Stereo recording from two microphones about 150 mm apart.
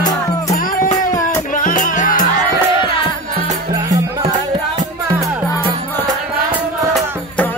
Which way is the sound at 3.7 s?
25° right (ahead or behind).